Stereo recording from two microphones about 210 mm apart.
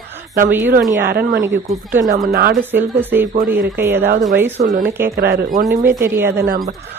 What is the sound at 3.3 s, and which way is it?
Speech, 45° right (ahead or behind).